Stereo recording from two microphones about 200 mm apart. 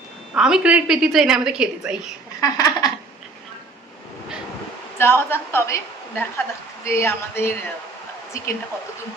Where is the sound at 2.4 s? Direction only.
20° left (ahead or behind).